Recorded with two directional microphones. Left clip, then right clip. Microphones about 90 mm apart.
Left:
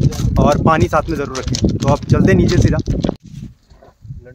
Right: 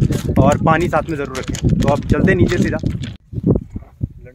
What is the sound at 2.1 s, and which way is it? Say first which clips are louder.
Speech: left 3 dB; 25° left (ahead or behind).